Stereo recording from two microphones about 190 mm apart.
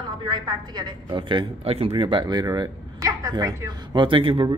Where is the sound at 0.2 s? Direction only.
20° right (ahead or behind).